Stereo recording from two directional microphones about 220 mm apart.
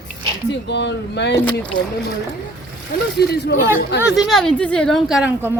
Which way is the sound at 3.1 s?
50° left (ahead or behind).